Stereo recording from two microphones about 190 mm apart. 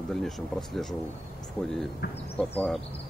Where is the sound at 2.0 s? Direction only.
55° left (ahead or behind).